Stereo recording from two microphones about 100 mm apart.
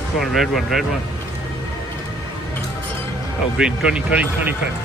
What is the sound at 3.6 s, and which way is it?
Speech, 10° right (ahead or behind).